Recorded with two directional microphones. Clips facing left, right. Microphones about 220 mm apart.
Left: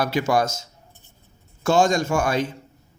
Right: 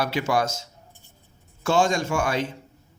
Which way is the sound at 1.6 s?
45° left (ahead or behind).